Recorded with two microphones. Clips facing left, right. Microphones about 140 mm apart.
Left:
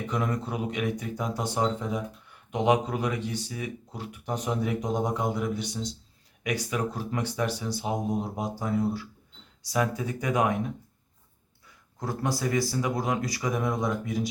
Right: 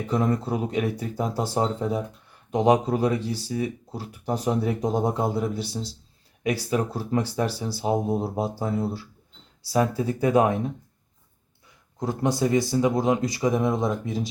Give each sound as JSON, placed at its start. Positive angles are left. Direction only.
{"t": 0.1, "sound": "speech", "side_deg": -35}
{"t": 11.9, "sound": "speech", "side_deg": -20}